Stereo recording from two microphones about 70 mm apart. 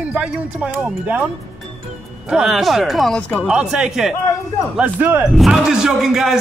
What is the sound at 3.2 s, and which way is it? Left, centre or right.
Speech, left.